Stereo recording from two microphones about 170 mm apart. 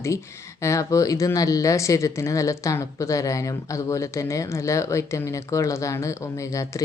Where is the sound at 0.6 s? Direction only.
15° left (ahead or behind).